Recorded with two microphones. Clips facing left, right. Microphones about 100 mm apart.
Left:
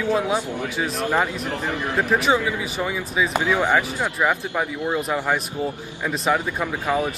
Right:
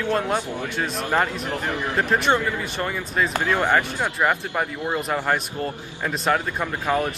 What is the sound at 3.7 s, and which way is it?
A man's voice, centre (ahead or behind).